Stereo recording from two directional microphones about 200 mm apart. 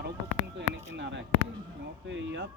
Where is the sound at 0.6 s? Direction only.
65° right (ahead or behind).